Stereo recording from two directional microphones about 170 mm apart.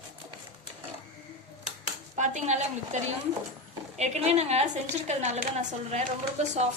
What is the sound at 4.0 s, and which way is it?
A woman's voice, 40° right (ahead or behind).